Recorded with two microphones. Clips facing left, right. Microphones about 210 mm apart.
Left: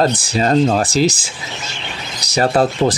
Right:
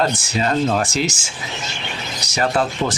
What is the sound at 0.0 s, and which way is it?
Speech, 35° left (ahead or behind).